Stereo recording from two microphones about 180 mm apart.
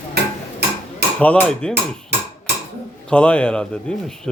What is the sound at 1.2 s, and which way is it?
Speech, 5° left (ahead or behind).